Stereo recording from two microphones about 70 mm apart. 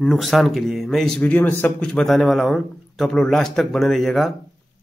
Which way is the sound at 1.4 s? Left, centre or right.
Left.